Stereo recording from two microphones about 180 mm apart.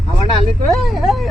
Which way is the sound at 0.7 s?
Centre (ahead or behind).